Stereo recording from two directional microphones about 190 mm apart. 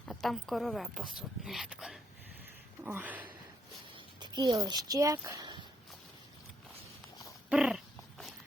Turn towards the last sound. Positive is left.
turn(degrees=-5)  # may be behind; listen again after turning